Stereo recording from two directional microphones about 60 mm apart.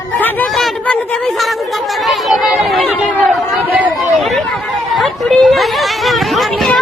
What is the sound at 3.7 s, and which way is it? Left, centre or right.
Chatter, right.